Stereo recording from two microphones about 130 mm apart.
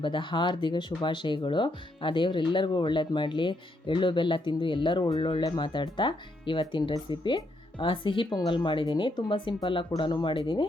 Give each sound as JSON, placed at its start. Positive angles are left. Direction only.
{"t": 0.0, "sound": "speech", "side_deg": 40}